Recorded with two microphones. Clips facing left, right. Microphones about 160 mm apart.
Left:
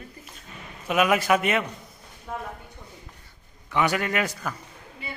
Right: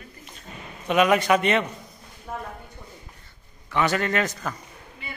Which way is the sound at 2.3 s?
10° right (ahead or behind).